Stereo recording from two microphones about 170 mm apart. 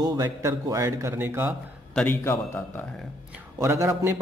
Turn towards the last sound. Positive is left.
turn(degrees=-15)  # may be behind; listen again after turning